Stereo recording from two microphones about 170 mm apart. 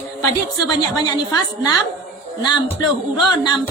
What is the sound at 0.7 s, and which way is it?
A man's voice, 25° left (ahead or behind).